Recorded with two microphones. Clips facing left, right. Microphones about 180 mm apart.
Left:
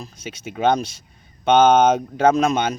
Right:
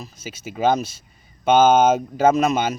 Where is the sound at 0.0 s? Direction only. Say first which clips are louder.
Left 1 dB; 5° right (ahead or behind).